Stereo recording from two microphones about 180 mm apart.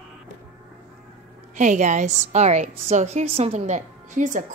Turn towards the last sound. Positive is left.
turn(degrees=-45)  # may be behind; listen again after turning